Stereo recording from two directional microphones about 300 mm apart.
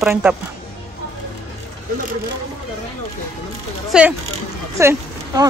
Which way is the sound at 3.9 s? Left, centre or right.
Centre.